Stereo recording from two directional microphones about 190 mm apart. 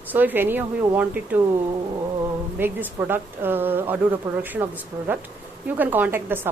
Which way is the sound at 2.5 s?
10° right (ahead or behind).